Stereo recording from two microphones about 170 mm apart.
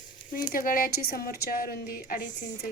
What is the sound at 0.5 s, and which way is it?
A woman's voice, 55° left (ahead or behind).